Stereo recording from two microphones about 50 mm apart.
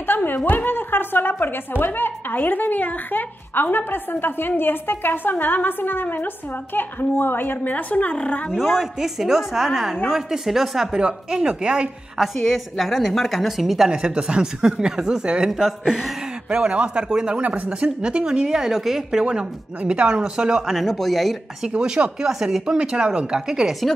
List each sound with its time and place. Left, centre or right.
0.0 s a sound: left
0.5 s a woman's voice: left
8.5 s speech: centre
12.2 s a woman's voice: centre
13.9 s speech: centre
16.5 s speech: right
17.4 s speech: right; by 19.2 s centre
19.2 s speech: right
20.8 s a woman's voice: centre
21.7 s speech: centre
22.8 s speech: right